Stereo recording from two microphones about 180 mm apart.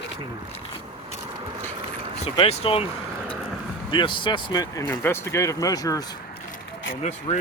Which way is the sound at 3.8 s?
25° left (ahead or behind).